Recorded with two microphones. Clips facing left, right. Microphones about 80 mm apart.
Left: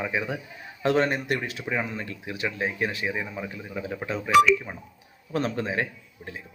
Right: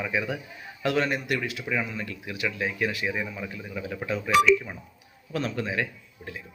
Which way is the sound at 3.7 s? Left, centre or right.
Left.